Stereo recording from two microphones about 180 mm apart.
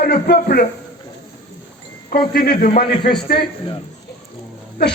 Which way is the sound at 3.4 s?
30° left (ahead or behind).